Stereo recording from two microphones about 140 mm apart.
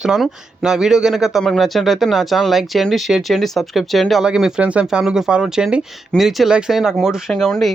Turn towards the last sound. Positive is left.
turn(degrees=5)  # may be behind; listen again after turning